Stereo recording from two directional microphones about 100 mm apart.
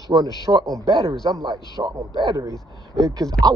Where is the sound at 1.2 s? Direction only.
55° right (ahead or behind).